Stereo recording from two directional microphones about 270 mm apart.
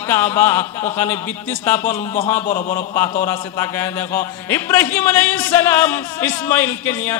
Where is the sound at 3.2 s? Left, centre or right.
Centre.